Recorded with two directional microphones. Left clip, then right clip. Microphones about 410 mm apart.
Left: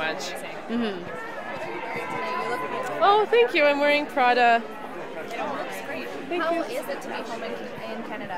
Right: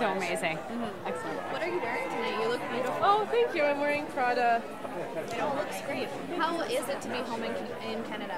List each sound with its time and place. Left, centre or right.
3.0 s speech: left